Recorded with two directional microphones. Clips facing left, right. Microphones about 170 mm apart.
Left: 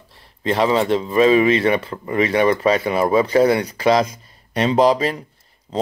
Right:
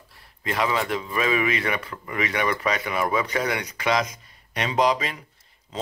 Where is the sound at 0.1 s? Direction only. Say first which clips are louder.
Left 8 dB; 25° left (ahead or behind).